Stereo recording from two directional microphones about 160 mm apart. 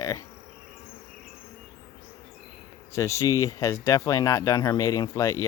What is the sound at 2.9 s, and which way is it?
Speech, 20° left (ahead or behind).